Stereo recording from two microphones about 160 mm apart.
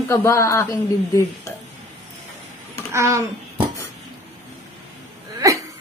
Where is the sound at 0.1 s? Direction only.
15° left (ahead or behind).